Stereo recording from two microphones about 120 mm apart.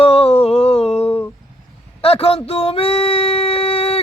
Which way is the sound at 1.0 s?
20° left (ahead or behind).